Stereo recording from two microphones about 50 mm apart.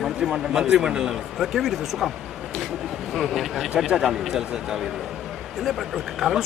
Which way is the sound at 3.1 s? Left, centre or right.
Centre.